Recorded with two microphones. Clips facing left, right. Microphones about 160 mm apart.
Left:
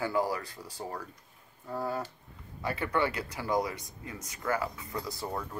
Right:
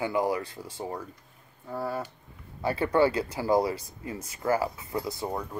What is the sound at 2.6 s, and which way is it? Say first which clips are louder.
Speech: right 7 dB; 30° right (ahead or behind).